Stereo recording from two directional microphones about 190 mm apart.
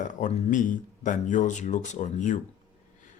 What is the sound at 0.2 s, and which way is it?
Speech, 40° left (ahead or behind).